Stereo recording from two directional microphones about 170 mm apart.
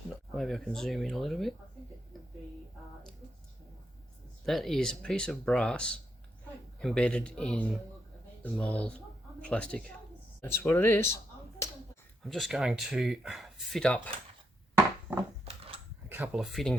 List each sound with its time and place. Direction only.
0.3 s speech: centre (ahead or behind)
4.4 s speech: centre (ahead or behind)
11.6 s finger snapping: 20° left (ahead or behind)
12.2 s speech: centre (ahead or behind)
16.0 s speech: 10° right (ahead or behind)